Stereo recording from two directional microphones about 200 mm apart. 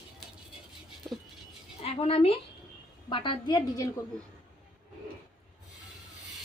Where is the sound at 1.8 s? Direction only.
30° left (ahead or behind).